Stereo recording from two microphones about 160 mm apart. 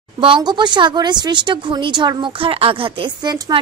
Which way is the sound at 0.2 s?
30° right (ahead or behind).